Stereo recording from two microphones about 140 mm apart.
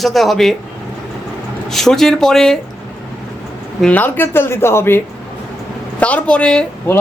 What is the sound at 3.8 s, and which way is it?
Speech, 10° left (ahead or behind).